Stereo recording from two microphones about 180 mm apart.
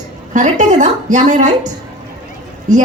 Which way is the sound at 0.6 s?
45° right (ahead or behind).